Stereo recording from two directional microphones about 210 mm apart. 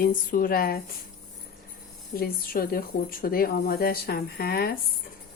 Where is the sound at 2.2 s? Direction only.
45° left (ahead or behind).